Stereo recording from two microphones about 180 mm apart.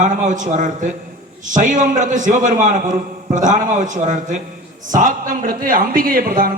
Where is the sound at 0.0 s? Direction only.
45° right (ahead or behind).